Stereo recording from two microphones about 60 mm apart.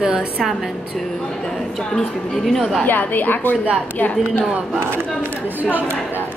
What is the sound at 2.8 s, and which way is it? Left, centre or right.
Speech, left.